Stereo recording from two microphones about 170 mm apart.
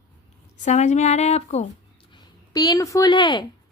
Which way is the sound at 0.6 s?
45° left (ahead or behind).